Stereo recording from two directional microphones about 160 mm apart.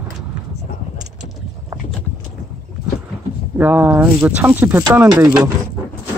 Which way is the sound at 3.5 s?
10° right (ahead or behind).